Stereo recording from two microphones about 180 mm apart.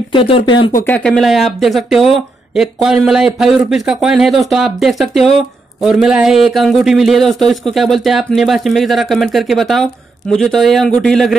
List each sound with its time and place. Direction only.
0.1 s speech: 30° left (ahead or behind)
0.8 s speech: 5° left (ahead or behind)